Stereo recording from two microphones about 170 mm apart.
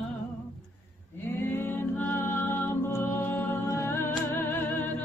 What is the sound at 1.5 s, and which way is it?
Music, 15° left (ahead or behind).